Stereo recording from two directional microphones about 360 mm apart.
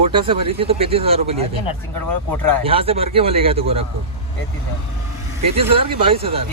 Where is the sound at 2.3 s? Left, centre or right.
Centre.